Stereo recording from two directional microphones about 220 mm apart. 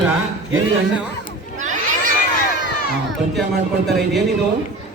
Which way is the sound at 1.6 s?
35° right (ahead or behind).